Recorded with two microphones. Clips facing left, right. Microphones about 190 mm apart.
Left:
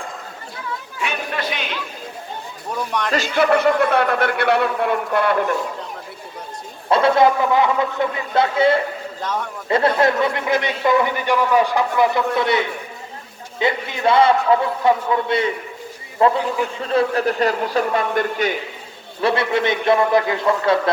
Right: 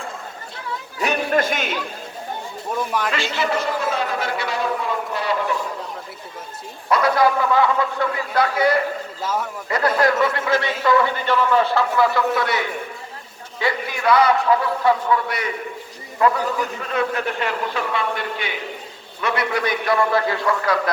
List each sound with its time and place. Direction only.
0.9 s chatter: 40° right (ahead or behind)
2.7 s a man's voice: 5° right (ahead or behind)
3.1 s a man's voice: 40° left (ahead or behind)
3.5 s a man's voice: 60° left (ahead or behind)
6.9 s a man's voice: 25° left (ahead or behind)
9.2 s a man's voice: 5° right (ahead or behind)
9.6 s a man's voice: 25° left (ahead or behind); by 18.5 s 45° left (ahead or behind)
19.2 s a man's voice: 30° left (ahead or behind)